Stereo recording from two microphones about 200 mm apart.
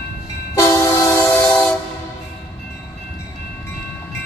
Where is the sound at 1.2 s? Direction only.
5° left (ahead or behind).